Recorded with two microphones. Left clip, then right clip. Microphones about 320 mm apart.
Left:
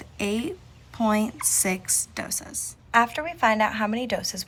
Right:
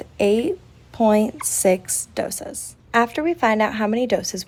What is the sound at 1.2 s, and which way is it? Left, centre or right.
A woman's voice, centre.